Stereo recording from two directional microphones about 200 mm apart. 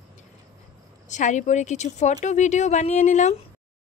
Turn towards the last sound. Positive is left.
turn(degrees=35)  # may be behind; listen again after turning